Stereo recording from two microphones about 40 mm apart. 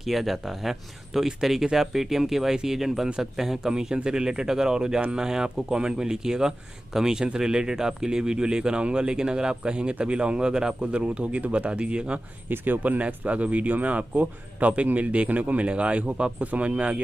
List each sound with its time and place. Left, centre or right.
0.0 s speech: centre; by 12.2 s right
12.4 s speech: right
13.0 s speech: right